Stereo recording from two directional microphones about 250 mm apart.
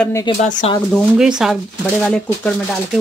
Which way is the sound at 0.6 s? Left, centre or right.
Left.